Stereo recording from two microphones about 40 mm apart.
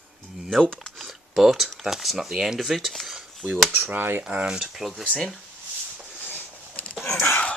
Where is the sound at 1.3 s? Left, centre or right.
Centre.